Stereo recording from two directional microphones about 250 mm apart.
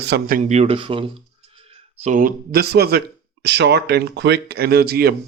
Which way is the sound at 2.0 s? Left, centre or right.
Right.